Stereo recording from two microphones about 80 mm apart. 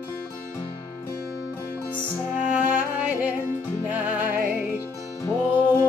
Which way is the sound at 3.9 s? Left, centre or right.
Right.